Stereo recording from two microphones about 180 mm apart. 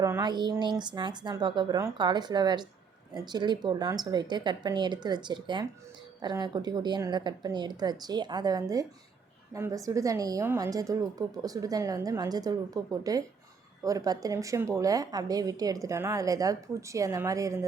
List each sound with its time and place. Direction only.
0.0 s speech: 20° right (ahead or behind)